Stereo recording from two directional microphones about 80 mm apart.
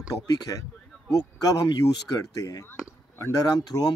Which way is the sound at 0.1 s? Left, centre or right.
Left.